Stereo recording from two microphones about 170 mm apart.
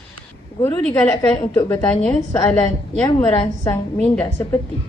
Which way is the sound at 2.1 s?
15° left (ahead or behind).